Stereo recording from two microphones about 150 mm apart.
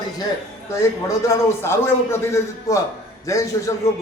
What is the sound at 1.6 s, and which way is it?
A man's voice, 15° left (ahead or behind).